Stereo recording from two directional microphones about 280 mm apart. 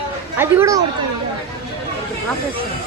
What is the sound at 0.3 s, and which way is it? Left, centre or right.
Speech, centre.